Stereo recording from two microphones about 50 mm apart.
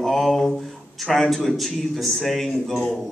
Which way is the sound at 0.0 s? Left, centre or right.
Centre.